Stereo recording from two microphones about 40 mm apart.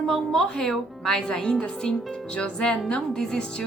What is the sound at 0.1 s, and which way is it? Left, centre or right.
A woman's voice, centre.